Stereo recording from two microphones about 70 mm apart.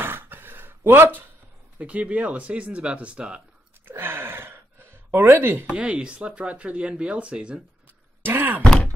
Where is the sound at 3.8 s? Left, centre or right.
Right.